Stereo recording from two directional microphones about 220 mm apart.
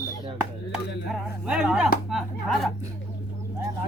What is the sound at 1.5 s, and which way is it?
Speech, 5° right (ahead or behind).